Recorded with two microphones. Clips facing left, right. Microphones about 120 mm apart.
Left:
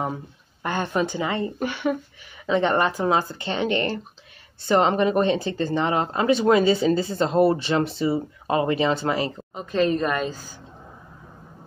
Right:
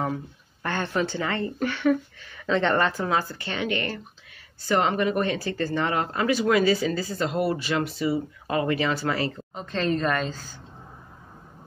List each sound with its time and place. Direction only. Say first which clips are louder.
0.0 s speech: even; 15° left (ahead or behind)